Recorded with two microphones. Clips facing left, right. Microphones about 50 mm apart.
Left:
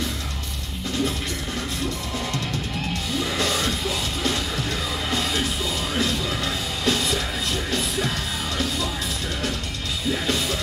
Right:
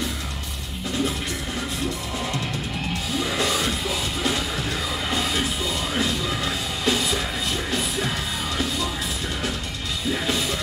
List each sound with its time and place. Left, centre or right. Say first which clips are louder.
3.2 s music: right 1 dB; centre
10.1 s music: even; centre